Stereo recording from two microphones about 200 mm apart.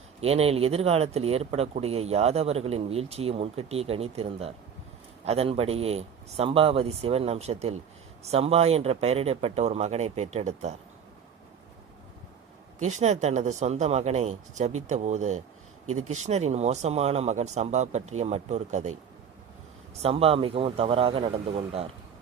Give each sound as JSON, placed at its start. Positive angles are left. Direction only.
{"t": 0.2, "sound": "speech", "side_deg": -30}
{"t": 12.8, "sound": "speech", "side_deg": -35}
{"t": 20.0, "sound": "a man's voice", "side_deg": -30}